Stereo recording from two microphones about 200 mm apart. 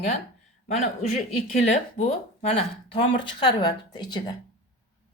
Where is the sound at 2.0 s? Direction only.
30° left (ahead or behind).